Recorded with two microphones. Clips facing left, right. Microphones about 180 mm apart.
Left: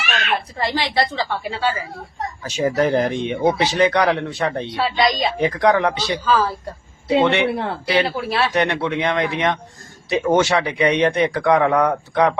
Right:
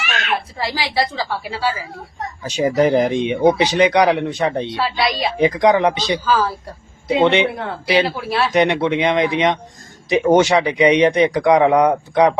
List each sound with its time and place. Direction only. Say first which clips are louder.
0.6 s a woman's voice: left 1 dB; 5° right (ahead or behind)
2.4 s speech: right 3 dB; 15° right (ahead or behind)
4.8 s a woman's voice: left 3 dB; 5° right (ahead or behind)
5.4 s speech: right 3 dB; 15° right (ahead or behind)
6.2 s a woman's voice: left 1 dB; centre (ahead or behind)
7.1 s speech: right 2 dB; 20° right (ahead or behind)
8.0 s a woman's voice: right 1 dB; centre (ahead or behind)
8.5 s speech: right 4 dB; 15° right (ahead or behind)